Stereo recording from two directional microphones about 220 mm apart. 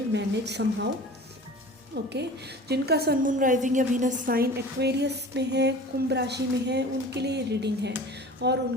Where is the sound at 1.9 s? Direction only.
50° right (ahead or behind).